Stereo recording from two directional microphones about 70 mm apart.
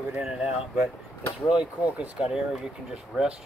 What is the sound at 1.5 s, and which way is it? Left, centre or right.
Speech, centre.